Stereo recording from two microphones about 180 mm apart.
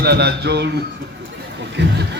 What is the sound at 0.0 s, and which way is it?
Speech, 65° right (ahead or behind).